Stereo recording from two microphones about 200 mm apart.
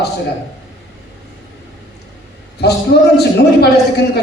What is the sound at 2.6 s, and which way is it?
A man's voice, 55° left (ahead or behind).